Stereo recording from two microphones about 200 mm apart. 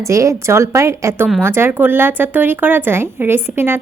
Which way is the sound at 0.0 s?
15° right (ahead or behind).